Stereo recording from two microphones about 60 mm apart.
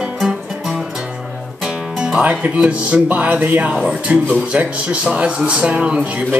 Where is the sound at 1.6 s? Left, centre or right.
Centre.